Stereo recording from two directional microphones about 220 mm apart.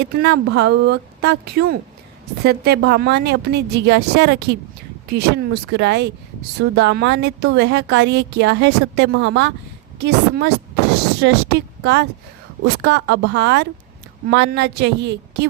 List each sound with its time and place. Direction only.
0.2 s a woman's voice: 50° right (ahead or behind)